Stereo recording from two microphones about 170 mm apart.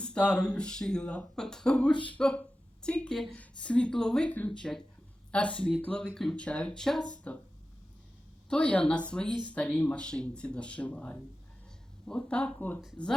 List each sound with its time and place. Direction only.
0.0 s a woman's voice: 5° left (ahead or behind)
1.9 s speech: 30° left (ahead or behind)
2.1 s a woman's voice: 5° left (ahead or behind)
8.4 s a woman's voice: 5° left (ahead or behind)